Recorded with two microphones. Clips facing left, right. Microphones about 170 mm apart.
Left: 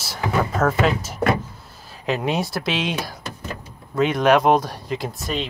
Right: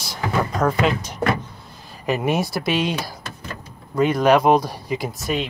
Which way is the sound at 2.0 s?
5° right (ahead or behind).